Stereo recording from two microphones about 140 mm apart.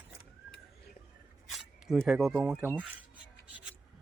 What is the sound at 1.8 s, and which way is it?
Speech, 5° right (ahead or behind).